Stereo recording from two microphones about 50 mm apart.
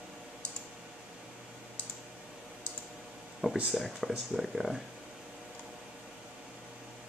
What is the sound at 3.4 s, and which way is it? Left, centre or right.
Speech, centre.